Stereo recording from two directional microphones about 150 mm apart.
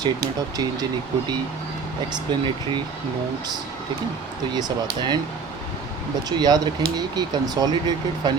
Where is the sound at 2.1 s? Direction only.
30° right (ahead or behind).